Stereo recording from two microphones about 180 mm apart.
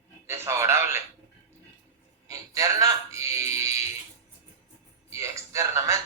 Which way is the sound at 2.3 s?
20° right (ahead or behind).